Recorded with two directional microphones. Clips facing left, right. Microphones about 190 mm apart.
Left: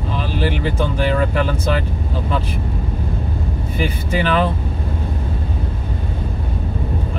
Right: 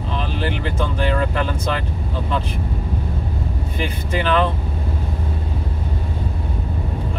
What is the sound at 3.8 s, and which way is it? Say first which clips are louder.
Speech: left 3 dB; 10° left (ahead or behind).